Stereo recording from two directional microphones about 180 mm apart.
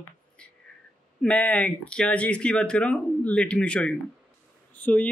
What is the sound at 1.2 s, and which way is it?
Speech, 5° left (ahead or behind).